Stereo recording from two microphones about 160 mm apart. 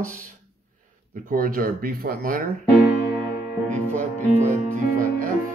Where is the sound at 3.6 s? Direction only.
50° right (ahead or behind).